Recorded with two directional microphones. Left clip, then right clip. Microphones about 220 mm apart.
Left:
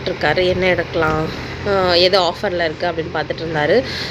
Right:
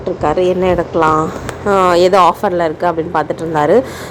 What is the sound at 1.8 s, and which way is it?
Speech, 25° right (ahead or behind).